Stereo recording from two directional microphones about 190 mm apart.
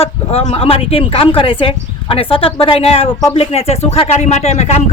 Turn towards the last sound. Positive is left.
turn(degrees=35)  # may be behind; listen again after turning